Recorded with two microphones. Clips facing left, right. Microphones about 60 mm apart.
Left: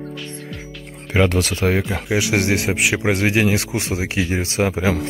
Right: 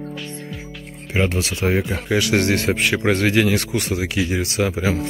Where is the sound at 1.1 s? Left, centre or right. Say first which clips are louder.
Left 3 dB; left.